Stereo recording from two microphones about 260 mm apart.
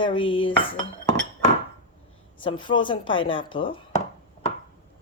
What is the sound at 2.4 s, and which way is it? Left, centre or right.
Speech, centre.